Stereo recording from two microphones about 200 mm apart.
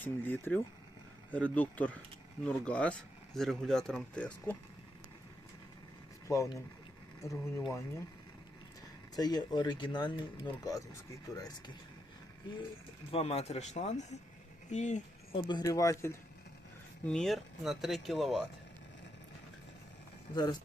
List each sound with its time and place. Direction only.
0.0 s speech: 10° left (ahead or behind)
6.2 s speech: 15° left (ahead or behind)
9.1 s speech: 20° left (ahead or behind)
13.1 s speech: 30° left (ahead or behind)
15.4 s speech: 20° left (ahead or behind)
17.1 s speech: centre (ahead or behind)
20.3 s speech: 20° left (ahead or behind)